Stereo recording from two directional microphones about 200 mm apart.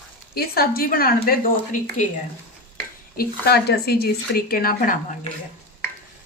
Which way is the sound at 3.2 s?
50° left (ahead or behind).